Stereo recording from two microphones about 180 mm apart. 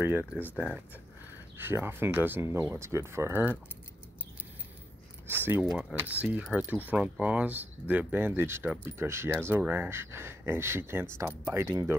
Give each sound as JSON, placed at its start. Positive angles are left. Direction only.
{"t": 0.0, "sound": "speech", "side_deg": -10}
{"t": 1.6, "sound": "speech", "side_deg": -10}
{"t": 5.3, "sound": "speech", "side_deg": -10}